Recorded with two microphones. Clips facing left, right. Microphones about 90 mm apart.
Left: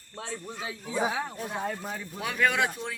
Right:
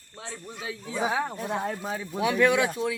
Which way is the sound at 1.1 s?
50° right (ahead or behind).